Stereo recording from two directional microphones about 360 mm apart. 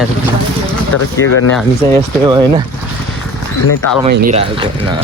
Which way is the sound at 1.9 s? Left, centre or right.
Centre.